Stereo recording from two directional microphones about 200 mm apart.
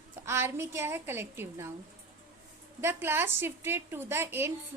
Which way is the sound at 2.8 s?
10° right (ahead or behind).